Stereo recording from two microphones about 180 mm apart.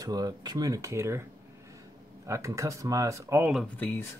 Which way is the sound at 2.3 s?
15° right (ahead or behind).